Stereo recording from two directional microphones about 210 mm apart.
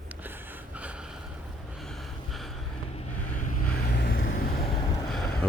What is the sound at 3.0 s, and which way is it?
Vehicle, 35° left (ahead or behind).